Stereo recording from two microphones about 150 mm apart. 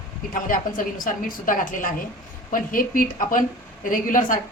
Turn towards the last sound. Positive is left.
turn(degrees=60)  # may be behind; listen again after turning